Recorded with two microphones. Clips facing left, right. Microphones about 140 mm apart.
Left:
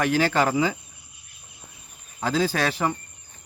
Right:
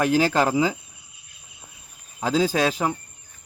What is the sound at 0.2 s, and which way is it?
Speech, 10° right (ahead or behind).